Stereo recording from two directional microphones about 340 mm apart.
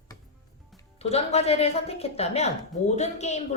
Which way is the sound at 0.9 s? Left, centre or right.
Centre.